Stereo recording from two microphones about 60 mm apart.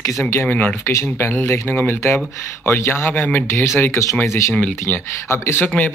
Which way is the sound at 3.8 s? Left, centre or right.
Left.